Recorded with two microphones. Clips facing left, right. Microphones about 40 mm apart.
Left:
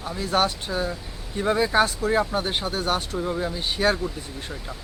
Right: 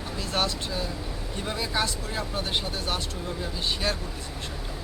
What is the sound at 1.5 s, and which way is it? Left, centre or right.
Speech, left.